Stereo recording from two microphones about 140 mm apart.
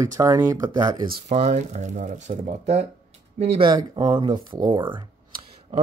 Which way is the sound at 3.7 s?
30° right (ahead or behind).